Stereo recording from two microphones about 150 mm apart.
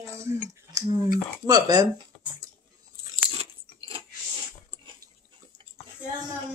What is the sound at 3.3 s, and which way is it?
Crunch, 40° right (ahead or behind).